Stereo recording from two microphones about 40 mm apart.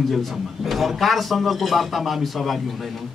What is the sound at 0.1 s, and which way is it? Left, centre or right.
A man's voice, centre.